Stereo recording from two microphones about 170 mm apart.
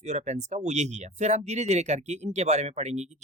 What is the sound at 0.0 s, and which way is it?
Speech, 40° right (ahead or behind).